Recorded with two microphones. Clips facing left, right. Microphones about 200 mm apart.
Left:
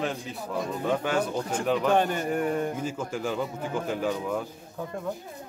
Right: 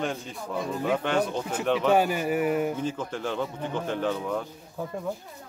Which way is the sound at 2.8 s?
10° left (ahead or behind).